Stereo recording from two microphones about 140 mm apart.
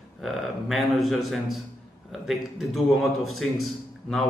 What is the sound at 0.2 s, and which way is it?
A man's voice, centre (ahead or behind).